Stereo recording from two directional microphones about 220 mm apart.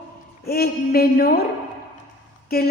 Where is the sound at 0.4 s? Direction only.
45° left (ahead or behind).